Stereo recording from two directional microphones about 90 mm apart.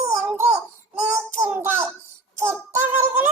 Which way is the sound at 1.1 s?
30° right (ahead or behind).